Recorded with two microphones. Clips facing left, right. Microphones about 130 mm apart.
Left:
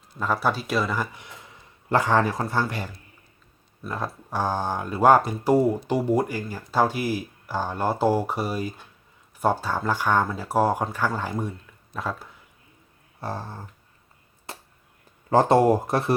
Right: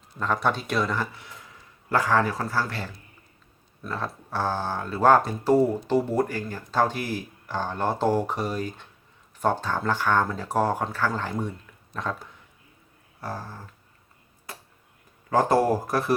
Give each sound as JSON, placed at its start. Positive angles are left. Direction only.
{"t": 0.2, "sound": "speech", "side_deg": 5}
{"t": 1.9, "sound": "speech", "side_deg": 25}
{"t": 13.1, "sound": "a sound", "side_deg": 25}
{"t": 15.3, "sound": "speech", "side_deg": 25}